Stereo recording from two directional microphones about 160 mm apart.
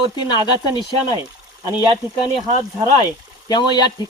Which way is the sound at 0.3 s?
30° left (ahead or behind).